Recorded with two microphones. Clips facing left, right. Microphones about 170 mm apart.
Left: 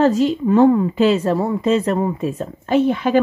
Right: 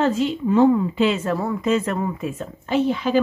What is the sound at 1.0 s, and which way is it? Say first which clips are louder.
Speech: left 5 dB; 35° left (ahead or behind).